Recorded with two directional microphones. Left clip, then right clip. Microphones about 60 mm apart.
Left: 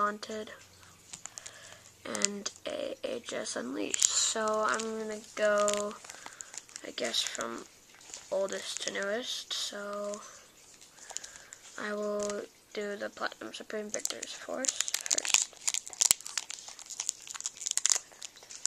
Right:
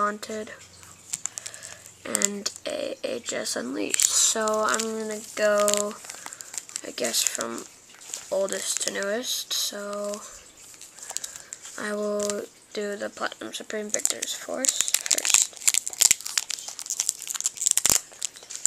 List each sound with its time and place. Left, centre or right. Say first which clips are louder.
0.0 s speech: right 5 dB; centre
1.2 s typing: right 9 dB; centre
2.6 s speech: right 5 dB; centre
8.1 s a sound: right 6 dB; centre
8.4 s speech: right 6 dB; centre
9.1 s speech: right 7 dB; right
9.8 s speech: right 6 dB; centre
11.1 s a sound: right 8 dB; centre
11.7 s speech: right 6 dB; centre
13.9 s speech: right 8 dB; centre
14.6 s crumpling: right 8 dB; centre